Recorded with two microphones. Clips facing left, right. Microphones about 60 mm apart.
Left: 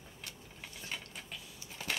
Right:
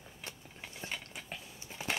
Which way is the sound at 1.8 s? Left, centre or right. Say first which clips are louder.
Right 2 dB; centre.